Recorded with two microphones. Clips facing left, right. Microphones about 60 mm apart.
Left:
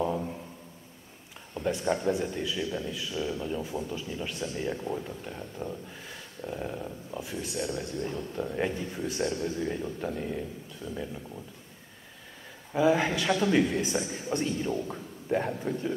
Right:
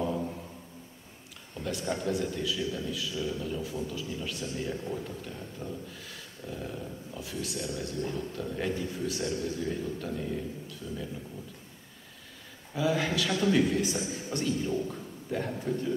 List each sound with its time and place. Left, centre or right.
1.5 s a sound: left
1.9 s a man's voice: left
12.7 s a man's voice: left